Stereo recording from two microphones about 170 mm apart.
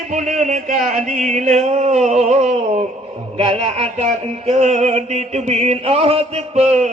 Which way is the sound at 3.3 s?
30° right (ahead or behind).